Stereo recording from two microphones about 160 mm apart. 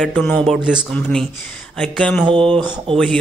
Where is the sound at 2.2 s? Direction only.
30° right (ahead or behind).